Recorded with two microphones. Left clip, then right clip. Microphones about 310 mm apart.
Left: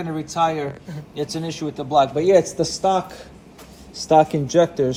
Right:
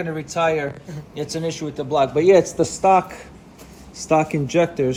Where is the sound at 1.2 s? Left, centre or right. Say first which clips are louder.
Right 1 dB; centre.